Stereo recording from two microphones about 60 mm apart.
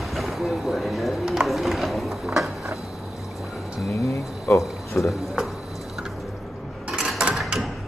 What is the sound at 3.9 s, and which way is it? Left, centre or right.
Speech, left.